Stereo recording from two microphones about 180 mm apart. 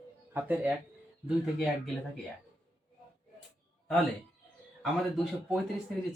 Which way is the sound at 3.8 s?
Centre (ahead or behind).